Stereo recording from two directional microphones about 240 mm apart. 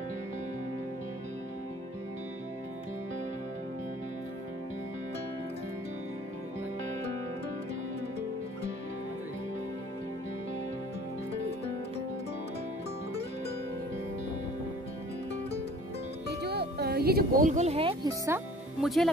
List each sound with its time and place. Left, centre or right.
16.3 s speech: right; by 18.4 s centre
18.8 s speech: centre